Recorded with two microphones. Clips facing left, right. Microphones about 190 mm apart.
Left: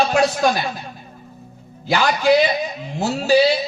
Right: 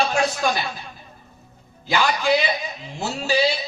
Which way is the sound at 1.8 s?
40° left (ahead or behind).